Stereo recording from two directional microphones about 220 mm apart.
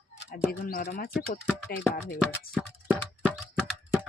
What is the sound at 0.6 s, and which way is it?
Speech, 40° left (ahead or behind).